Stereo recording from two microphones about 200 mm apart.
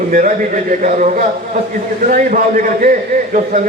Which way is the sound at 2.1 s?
40° right (ahead or behind).